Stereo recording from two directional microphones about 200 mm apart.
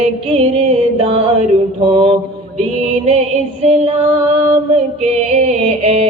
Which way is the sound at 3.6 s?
25° right (ahead or behind).